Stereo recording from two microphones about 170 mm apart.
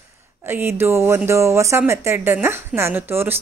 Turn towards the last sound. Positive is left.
turn(degrees=-10)  # may be behind; listen again after turning